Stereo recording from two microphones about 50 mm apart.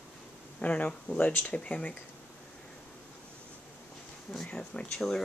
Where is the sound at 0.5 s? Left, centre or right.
Left.